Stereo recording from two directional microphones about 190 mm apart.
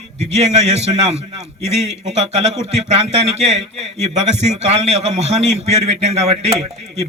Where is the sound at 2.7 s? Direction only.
35° right (ahead or behind).